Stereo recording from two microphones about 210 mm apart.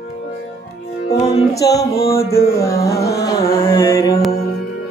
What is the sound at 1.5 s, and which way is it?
Mantra, 15° left (ahead or behind).